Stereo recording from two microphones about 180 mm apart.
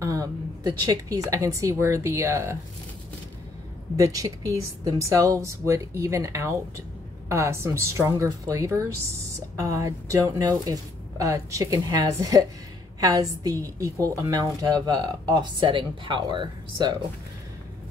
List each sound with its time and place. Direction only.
0.0 s speech: 20° right (ahead or behind)
3.9 s speech: 20° right (ahead or behind)